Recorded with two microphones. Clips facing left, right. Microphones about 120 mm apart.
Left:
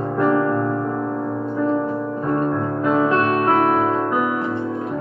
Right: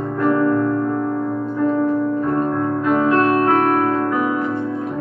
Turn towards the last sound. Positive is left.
turn(degrees=20)  # may be behind; listen again after turning